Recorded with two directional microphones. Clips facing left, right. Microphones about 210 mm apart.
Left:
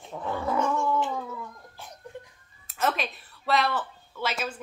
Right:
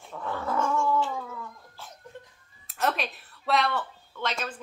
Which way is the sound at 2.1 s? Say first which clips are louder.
Left 4 dB; 15° left (ahead or behind).